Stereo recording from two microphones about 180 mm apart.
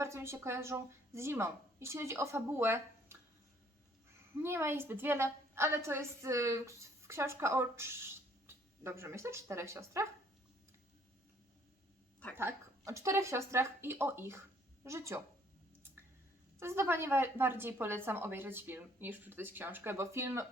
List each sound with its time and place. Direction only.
0.0 s a woman's voice: 15° right (ahead or behind)
4.4 s a woman's voice: 15° right (ahead or behind)
12.4 s a woman's voice: 15° right (ahead or behind)
16.6 s a woman's voice: 15° right (ahead or behind)